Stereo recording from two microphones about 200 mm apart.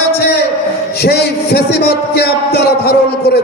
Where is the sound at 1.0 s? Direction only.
55° left (ahead or behind).